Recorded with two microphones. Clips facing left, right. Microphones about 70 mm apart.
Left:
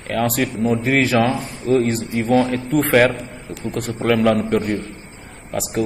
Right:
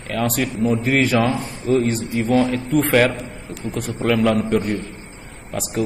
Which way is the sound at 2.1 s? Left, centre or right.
Left.